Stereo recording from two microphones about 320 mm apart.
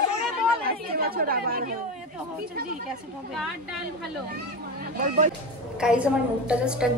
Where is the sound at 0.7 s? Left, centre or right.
Right.